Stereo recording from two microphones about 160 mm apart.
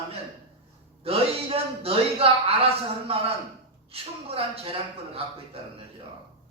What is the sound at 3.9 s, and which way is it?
Speech, 35° right (ahead or behind).